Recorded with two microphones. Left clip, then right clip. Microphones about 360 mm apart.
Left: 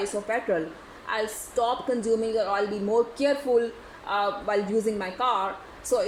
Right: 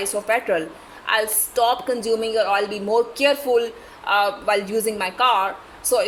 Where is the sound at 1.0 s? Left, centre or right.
Right.